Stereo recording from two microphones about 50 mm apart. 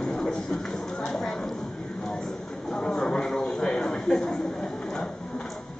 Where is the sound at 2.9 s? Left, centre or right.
Centre.